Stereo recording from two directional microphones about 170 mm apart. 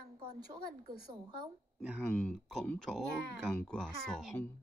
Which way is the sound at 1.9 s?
5° left (ahead or behind).